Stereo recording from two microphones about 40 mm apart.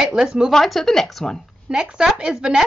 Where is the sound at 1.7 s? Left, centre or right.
Centre.